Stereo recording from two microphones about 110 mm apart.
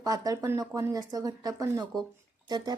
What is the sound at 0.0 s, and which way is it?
A woman's voice, 35° right (ahead or behind).